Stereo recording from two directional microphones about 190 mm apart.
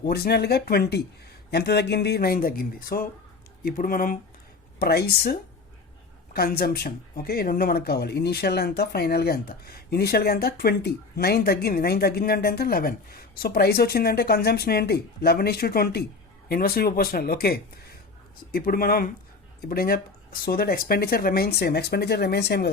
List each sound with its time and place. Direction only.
0.0 s speech: 55° left (ahead or behind)